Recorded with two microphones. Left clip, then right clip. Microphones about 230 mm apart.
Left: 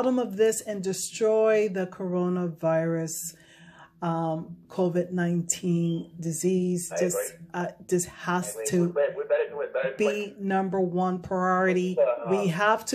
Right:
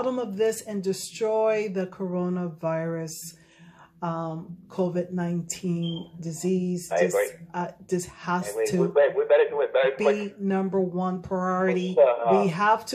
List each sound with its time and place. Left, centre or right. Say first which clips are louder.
0.0 s speech: left 2 dB; left
8.8 s a man's voice: right 8 dB; right
9.9 s speech: right 3 dB; left
11.9 s a man's voice: right 5 dB; right
12.4 s speech: right 2 dB; left